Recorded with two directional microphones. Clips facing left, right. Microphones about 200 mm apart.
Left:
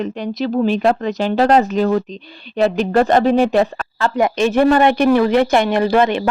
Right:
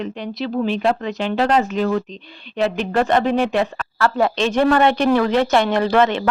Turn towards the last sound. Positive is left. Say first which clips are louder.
# left 2 dB
turn(degrees=10)  # may be behind; listen again after turning